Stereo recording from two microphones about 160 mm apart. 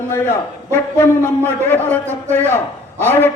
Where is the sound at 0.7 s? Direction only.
15° left (ahead or behind).